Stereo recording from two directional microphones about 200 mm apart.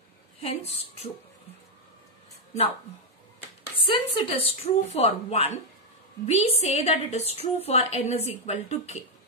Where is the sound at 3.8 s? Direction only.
25° left (ahead or behind).